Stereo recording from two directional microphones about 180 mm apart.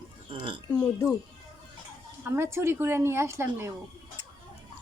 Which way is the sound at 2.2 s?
15° right (ahead or behind).